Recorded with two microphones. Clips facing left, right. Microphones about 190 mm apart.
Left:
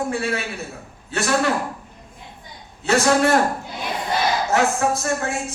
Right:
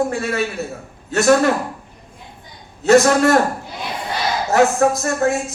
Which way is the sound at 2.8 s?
40° right (ahead or behind).